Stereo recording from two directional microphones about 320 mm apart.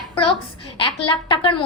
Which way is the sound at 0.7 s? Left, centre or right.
Centre.